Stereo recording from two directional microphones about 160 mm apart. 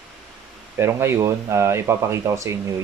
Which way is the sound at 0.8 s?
15° right (ahead or behind).